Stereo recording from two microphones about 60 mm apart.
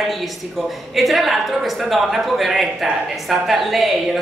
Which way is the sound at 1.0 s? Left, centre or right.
Centre.